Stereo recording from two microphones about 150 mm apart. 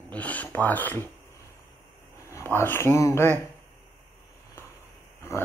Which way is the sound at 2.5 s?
15° left (ahead or behind).